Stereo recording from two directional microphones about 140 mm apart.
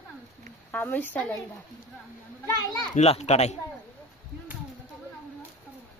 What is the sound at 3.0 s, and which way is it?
Speech, 50° left (ahead or behind).